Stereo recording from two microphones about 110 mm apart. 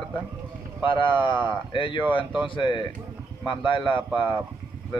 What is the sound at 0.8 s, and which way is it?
Speech, 45° left (ahead or behind).